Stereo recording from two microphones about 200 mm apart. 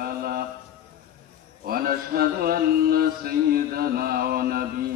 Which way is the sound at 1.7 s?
50° right (ahead or behind).